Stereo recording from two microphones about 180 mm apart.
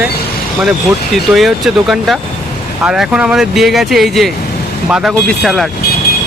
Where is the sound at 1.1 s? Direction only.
Centre (ahead or behind).